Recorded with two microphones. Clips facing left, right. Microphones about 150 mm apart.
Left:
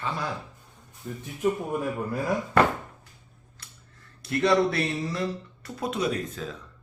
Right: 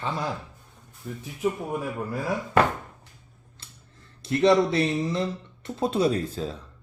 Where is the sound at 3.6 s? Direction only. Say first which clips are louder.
Right 1 dB; 25° right (ahead or behind).